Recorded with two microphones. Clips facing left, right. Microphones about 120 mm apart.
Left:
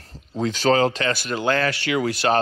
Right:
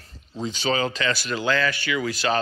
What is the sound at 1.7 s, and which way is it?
Speech, 75° left (ahead or behind).